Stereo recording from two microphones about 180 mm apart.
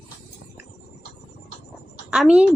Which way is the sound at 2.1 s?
5° right (ahead or behind).